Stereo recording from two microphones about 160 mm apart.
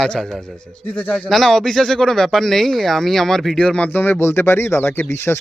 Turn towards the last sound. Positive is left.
turn(degrees=15)  # may be behind; listen again after turning